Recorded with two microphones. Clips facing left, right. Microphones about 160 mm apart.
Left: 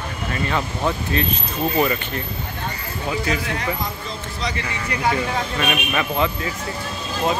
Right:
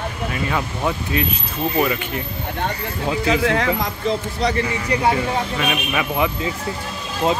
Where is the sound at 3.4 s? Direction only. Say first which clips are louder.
Right 6 dB; 90° right.